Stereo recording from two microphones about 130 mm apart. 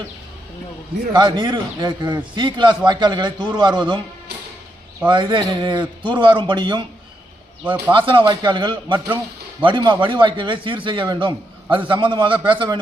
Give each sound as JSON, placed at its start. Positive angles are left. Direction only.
{"t": 1.1, "sound": "a man's voice", "side_deg": -35}
{"t": 5.0, "sound": "a man's voice", "side_deg": -35}
{"t": 7.6, "sound": "speech", "side_deg": -15}
{"t": 7.9, "sound": "a man's voice", "side_deg": -40}